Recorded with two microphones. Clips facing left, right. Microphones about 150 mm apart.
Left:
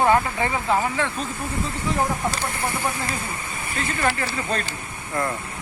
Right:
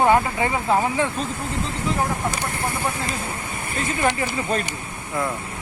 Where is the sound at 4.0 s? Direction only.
15° right (ahead or behind).